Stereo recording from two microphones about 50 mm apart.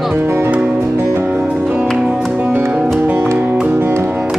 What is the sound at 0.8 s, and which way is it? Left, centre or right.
Music, right.